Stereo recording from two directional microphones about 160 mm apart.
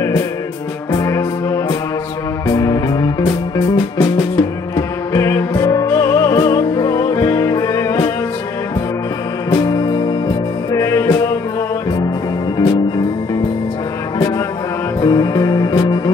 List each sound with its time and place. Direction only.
0.9 s music: 20° left (ahead or behind)
9.6 s music: 20° left (ahead or behind)
12.5 s music: 25° left (ahead or behind)
15.0 s music: 25° left (ahead or behind)